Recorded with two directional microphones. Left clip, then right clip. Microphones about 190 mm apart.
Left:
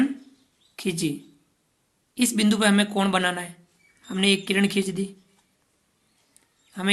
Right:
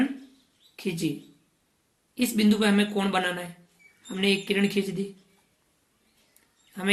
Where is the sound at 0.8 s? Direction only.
45° left (ahead or behind).